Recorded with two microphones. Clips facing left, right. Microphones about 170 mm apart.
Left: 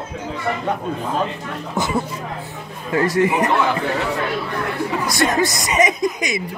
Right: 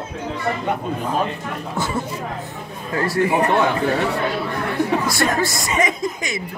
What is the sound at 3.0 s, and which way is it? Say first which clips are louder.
Speech: left 1 dB; 20° left (ahead or behind).